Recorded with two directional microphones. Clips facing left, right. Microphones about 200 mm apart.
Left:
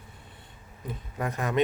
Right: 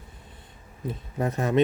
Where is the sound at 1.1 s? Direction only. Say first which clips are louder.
Right 5 dB; 30° right (ahead or behind).